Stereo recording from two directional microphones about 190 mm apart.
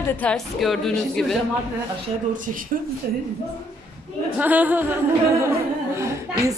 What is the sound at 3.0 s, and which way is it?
Speech, 50° right (ahead or behind).